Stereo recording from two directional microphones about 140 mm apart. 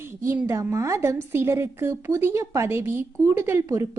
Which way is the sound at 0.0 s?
15° right (ahead or behind).